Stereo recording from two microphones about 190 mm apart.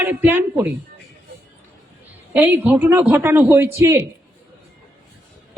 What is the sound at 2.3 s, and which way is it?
A man's voice, 10° right (ahead or behind).